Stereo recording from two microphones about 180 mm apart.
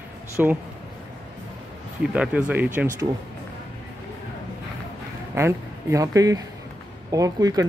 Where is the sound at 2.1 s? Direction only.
5° right (ahead or behind).